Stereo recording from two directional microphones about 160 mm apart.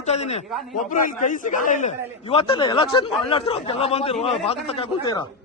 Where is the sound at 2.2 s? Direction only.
35° left (ahead or behind).